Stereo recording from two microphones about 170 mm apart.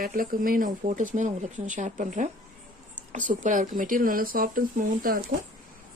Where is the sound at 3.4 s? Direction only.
50° right (ahead or behind).